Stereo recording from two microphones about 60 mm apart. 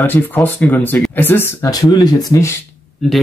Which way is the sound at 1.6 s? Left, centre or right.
Left.